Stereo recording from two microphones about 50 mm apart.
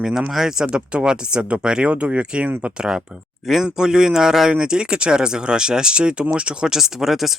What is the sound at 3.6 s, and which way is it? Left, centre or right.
Speech, centre.